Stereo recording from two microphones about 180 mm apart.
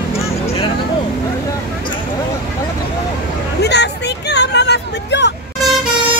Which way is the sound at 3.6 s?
70° left (ahead or behind).